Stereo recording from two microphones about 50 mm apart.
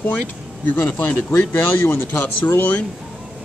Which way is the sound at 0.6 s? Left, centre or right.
Left.